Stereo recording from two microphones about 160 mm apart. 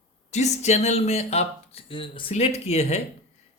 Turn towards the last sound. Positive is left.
turn(degrees=40)  # may be behind; listen again after turning